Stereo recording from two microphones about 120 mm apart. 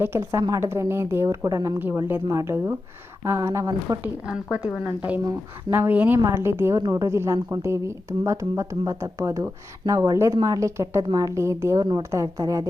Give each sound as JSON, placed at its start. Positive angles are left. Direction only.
{"t": 0.0, "sound": "a woman's voice", "side_deg": -20}
{"t": 4.0, "sound": "a woman's voice", "side_deg": -10}